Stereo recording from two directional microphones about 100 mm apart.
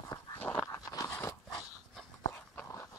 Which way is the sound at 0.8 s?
35° left (ahead or behind).